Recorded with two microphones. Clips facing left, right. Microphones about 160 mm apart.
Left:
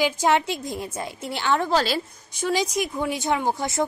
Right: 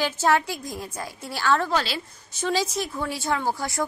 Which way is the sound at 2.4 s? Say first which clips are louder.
Left 2 dB; 15° left (ahead or behind).